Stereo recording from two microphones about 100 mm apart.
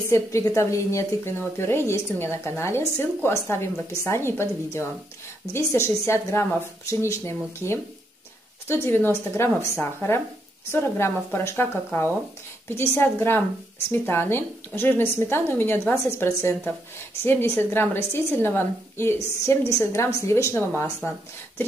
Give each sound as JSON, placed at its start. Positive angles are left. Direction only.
{"t": 0.1, "sound": "a woman's voice", "side_deg": 30}